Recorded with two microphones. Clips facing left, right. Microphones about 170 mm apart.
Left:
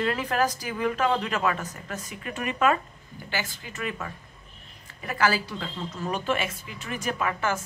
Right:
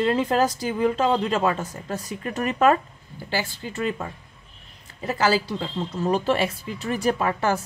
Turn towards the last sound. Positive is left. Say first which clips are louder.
# right 5 dB
turn(degrees=-35)  # may be behind; listen again after turning